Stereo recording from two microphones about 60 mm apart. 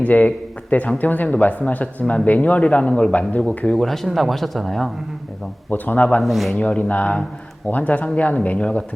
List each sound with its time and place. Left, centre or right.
0.0 s speech: left
3.8 s speech: centre
5.7 s speech: left
6.2 s speech: centre
6.6 s speech: left